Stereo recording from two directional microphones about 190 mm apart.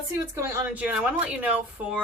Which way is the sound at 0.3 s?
15° right (ahead or behind).